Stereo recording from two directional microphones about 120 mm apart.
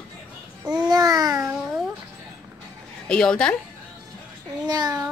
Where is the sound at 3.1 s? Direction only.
5° left (ahead or behind).